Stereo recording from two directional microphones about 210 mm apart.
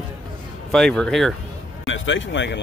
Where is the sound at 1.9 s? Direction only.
60° left (ahead or behind).